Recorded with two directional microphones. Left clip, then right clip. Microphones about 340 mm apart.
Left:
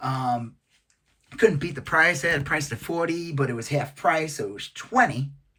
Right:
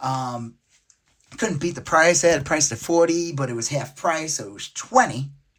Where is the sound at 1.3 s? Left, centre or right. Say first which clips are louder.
Left 4 dB; centre.